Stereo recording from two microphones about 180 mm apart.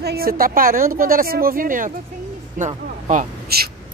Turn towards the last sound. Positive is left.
turn(degrees=-50)  # may be behind; listen again after turning